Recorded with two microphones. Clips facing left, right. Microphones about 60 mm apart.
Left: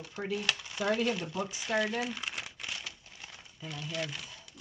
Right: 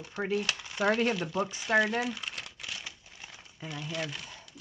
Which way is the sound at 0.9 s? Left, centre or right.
Right.